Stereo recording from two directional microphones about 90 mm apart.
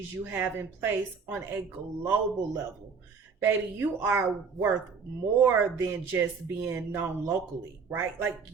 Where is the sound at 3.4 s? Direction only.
25° right (ahead or behind).